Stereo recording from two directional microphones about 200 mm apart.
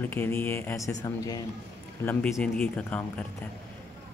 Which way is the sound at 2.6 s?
5° left (ahead or behind).